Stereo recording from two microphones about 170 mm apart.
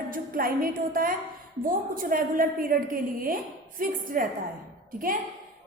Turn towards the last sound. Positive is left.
turn(degrees=-55)  # may be behind; listen again after turning